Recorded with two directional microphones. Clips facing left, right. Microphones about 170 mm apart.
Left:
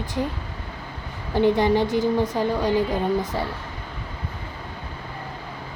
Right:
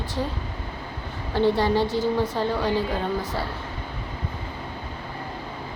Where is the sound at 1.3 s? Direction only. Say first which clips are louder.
Left 2 dB; 15° left (ahead or behind).